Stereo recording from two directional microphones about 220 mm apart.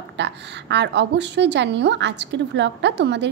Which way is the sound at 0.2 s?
50° right (ahead or behind).